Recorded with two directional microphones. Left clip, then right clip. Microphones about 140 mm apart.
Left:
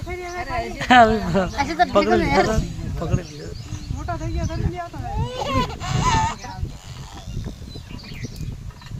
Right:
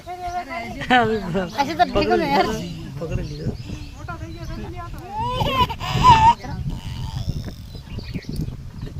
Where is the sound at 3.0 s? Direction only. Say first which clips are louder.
Left 2 dB; 35° left (ahead or behind).